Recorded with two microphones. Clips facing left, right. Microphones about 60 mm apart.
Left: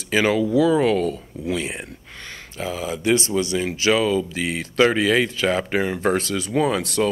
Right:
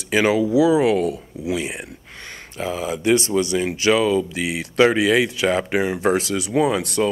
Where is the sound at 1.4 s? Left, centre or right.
Centre.